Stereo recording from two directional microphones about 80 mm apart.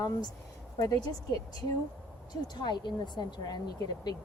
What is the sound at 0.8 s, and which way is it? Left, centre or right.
Speech, left.